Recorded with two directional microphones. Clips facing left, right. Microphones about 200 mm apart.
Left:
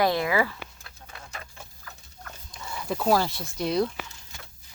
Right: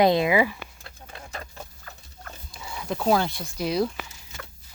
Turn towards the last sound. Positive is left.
turn(degrees=0)  # may be behind; listen again after turning